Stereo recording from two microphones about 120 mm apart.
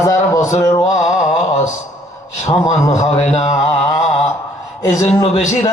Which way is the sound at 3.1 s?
60° left (ahead or behind).